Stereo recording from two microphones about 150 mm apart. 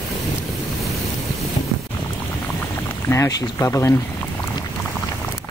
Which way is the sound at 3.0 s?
20° left (ahead or behind).